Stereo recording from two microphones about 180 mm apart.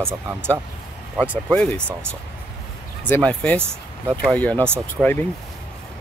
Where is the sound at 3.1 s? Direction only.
5° left (ahead or behind).